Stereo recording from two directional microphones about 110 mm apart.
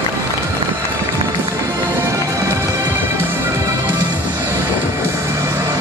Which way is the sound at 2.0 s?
25° right (ahead or behind).